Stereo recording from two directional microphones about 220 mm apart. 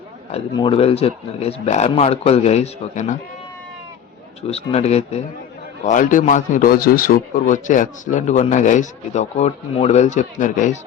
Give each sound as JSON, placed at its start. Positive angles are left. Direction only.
{"t": 0.3, "sound": "speech", "side_deg": 25}
{"t": 4.4, "sound": "a man's voice", "side_deg": 30}